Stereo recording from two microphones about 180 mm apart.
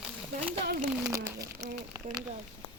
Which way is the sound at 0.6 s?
55° right (ahead or behind).